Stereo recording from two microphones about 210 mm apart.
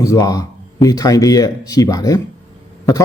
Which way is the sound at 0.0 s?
15° left (ahead or behind).